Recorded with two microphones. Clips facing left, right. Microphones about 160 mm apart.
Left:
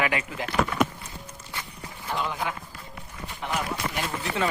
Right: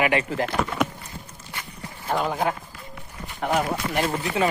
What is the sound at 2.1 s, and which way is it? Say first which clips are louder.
Speech: right 6 dB; 50° right (ahead or behind).